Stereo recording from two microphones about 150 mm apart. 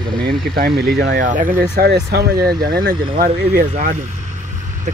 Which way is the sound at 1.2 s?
60° right (ahead or behind).